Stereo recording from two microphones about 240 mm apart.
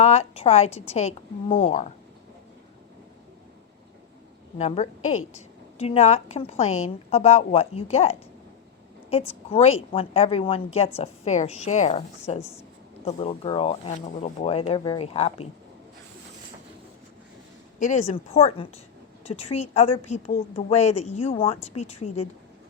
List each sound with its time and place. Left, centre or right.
0.0 s a woman's voice: left
4.5 s a woman's voice: left
12.4 s a woman's voice: centre
13.1 s a woman's voice: left
17.7 s a woman's voice: left